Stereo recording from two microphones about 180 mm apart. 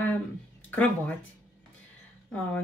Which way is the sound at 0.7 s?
10° left (ahead or behind).